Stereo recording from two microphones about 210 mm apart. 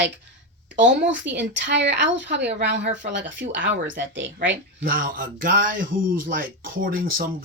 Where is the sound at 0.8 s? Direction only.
60° right (ahead or behind).